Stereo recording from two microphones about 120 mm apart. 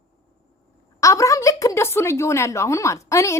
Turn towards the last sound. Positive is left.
turn(degrees=25)  # may be behind; listen again after turning